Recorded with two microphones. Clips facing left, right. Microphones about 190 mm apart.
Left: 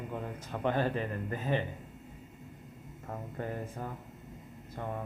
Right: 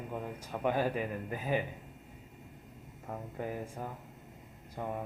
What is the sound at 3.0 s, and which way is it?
Speech, 5° right (ahead or behind).